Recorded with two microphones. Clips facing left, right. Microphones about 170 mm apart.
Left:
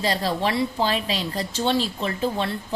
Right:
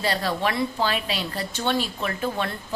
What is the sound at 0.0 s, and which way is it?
A woman's voice, 35° left (ahead or behind).